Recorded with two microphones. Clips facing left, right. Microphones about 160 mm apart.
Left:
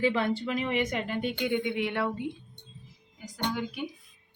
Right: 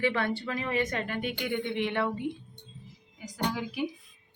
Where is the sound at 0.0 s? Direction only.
20° left (ahead or behind); by 2.2 s 5° left (ahead or behind).